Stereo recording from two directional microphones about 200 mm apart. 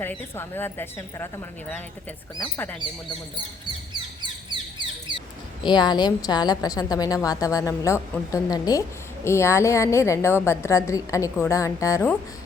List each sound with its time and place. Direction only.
0.0 s a woman's voice: 10° left (ahead or behind)
3.9 s bird: 20° right (ahead or behind)
5.6 s a woman's voice: 20° left (ahead or behind)